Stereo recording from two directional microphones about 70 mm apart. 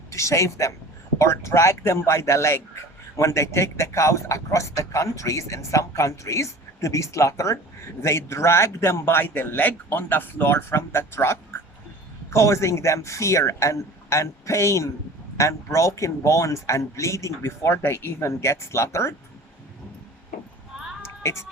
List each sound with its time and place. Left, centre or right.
0.1 s a man's voice: left
21.0 s music: left